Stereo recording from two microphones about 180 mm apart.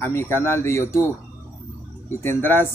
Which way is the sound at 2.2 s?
10° left (ahead or behind).